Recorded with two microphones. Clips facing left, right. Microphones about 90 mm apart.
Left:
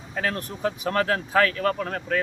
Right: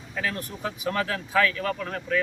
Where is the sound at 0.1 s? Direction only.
45° left (ahead or behind).